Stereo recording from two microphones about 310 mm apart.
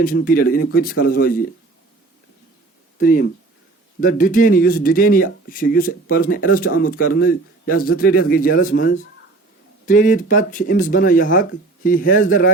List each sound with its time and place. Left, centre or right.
0.0 s speech: left
3.0 s speech: left